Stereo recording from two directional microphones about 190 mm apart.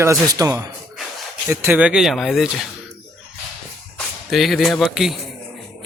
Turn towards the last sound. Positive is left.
turn(degrees=0)  # may be behind; listen again after turning